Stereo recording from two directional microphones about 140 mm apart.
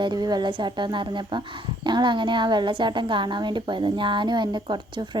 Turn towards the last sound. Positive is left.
turn(degrees=-35)  # may be behind; listen again after turning